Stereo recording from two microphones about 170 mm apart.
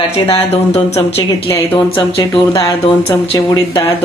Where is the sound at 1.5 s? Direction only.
15° left (ahead or behind).